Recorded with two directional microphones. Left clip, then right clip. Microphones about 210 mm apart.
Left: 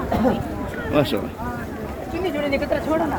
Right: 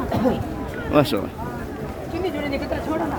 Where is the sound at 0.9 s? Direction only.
40° right (ahead or behind).